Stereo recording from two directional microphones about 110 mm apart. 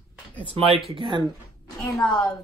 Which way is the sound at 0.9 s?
50° right (ahead or behind).